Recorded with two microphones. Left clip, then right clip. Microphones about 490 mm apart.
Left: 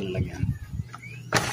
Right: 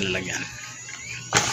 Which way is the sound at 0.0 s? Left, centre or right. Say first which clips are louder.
Right 7 dB; left.